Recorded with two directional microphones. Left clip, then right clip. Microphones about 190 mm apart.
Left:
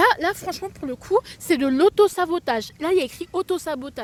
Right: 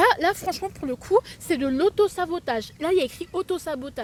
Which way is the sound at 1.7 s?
50° left (ahead or behind).